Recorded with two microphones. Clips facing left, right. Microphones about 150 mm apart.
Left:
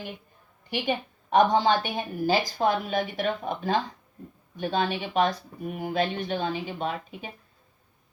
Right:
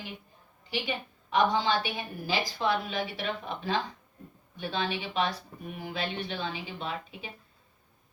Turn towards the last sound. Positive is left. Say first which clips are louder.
# left 5 dB
turn(degrees=45)  # may be behind; listen again after turning